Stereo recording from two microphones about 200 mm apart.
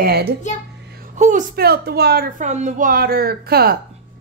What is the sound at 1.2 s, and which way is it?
A woman's voice, 40° right (ahead or behind).